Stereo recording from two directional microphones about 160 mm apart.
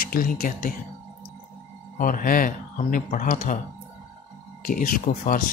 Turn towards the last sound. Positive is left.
turn(degrees=60)  # may be behind; listen again after turning